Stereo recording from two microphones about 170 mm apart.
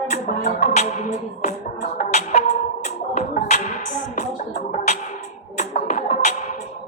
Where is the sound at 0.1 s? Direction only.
55° left (ahead or behind).